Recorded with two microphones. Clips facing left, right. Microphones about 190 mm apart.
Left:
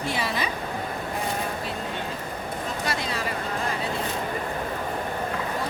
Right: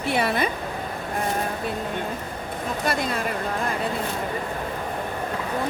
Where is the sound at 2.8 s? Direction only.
55° right (ahead or behind).